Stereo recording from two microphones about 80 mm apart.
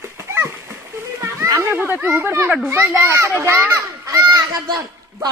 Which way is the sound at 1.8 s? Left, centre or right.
Centre.